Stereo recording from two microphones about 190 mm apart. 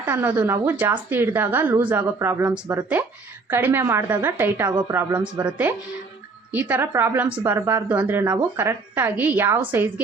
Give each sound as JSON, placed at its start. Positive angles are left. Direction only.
{"t": 0.0, "sound": "a woman's voice", "side_deg": -10}
{"t": 4.7, "sound": "a woman's voice", "side_deg": -20}
{"t": 5.4, "sound": "a woman's voice", "side_deg": -10}